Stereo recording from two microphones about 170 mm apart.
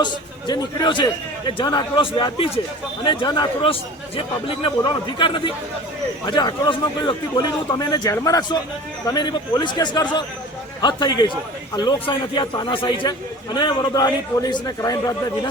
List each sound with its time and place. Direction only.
0.0 s a man's voice: 25° left (ahead or behind)